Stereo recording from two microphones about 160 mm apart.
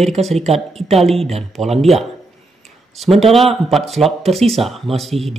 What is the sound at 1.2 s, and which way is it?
Speech, 40° right (ahead or behind).